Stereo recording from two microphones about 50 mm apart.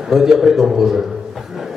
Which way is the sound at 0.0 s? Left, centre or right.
Centre.